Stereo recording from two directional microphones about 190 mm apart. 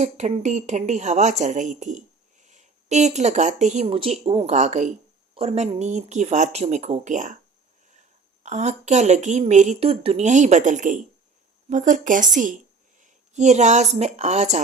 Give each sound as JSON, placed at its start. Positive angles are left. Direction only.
{"t": 0.0, "sound": "a woman's voice", "side_deg": -35}
{"t": 8.4, "sound": "a woman's voice", "side_deg": -35}
{"t": 13.0, "sound": "a sound", "side_deg": -40}
{"t": 14.0, "sound": "a woman's voice", "side_deg": -35}